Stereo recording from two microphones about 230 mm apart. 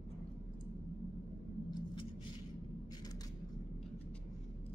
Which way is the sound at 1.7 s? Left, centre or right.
Centre.